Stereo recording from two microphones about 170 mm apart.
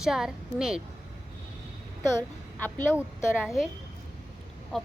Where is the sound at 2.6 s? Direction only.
10° left (ahead or behind).